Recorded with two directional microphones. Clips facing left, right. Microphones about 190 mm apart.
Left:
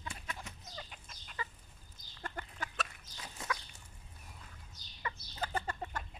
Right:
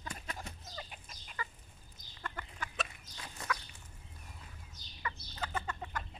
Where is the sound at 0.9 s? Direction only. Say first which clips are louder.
Right 1 dB; 15° right (ahead or behind).